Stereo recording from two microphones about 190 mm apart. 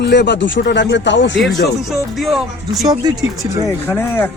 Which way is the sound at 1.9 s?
Centre (ahead or behind).